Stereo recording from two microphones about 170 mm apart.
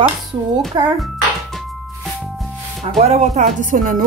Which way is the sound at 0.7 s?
25° right (ahead or behind).